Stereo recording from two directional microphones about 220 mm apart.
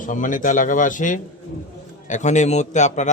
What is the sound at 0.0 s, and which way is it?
A man's voice, 35° left (ahead or behind).